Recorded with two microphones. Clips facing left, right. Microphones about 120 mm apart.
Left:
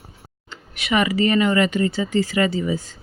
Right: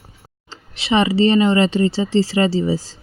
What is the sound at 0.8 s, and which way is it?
Speech, 30° right (ahead or behind).